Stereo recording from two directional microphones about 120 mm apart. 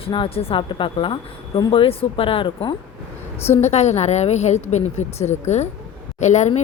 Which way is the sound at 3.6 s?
70° left (ahead or behind).